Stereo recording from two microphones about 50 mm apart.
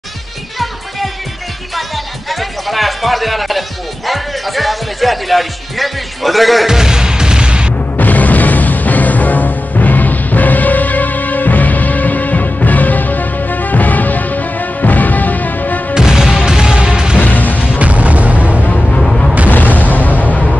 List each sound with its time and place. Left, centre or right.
0.6 s music: centre
8.0 s music: left
15.9 s music: centre
17.2 s music: left
17.7 s artillery fire: right
18.7 s music: centre
19.0 s music: centre
19.5 s boom: left
19.9 s music: left